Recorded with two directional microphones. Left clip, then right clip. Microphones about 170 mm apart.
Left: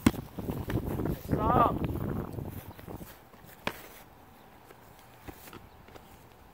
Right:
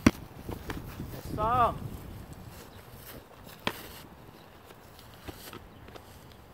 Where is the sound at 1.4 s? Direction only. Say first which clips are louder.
Even; 40° right (ahead or behind).